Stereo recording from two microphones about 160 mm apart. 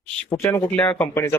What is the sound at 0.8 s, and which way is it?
Speech, 10° left (ahead or behind).